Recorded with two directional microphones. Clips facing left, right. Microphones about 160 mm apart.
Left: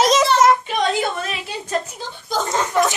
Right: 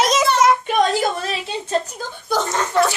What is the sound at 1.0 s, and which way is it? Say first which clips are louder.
Speech: right 2 dB; 30° right (ahead or behind).